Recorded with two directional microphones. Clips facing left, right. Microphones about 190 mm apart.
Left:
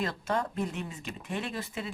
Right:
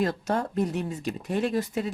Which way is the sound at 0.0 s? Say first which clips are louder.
Right 5 dB; 40° right (ahead or behind).